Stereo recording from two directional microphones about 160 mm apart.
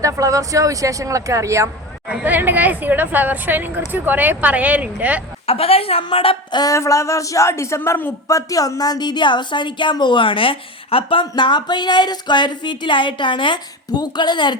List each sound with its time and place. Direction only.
0.0 s speech: 20° right (ahead or behind)
2.0 s speech: 10° right (ahead or behind)
5.5 s a woman's voice: 40° left (ahead or behind)